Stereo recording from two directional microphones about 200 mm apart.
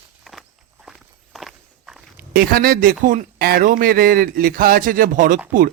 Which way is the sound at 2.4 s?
45° right (ahead or behind).